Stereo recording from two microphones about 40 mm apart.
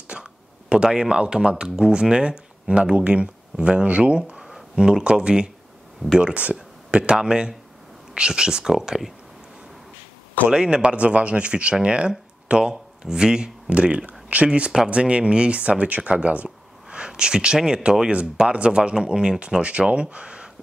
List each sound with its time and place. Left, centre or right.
0.1 s a sound: right
0.9 s speech: right
4.4 s a sound: centre
4.7 s speech: right
10.5 s speech: right
13.7 s speech: right